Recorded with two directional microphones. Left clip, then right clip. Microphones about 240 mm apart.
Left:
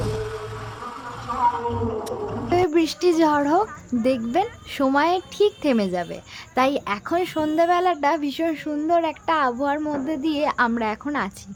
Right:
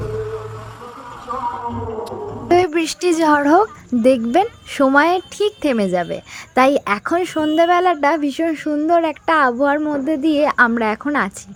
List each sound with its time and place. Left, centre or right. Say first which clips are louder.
2.5 s speech: right 5 dB; right